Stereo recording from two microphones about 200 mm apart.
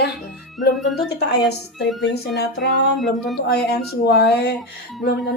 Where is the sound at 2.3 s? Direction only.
60° left (ahead or behind).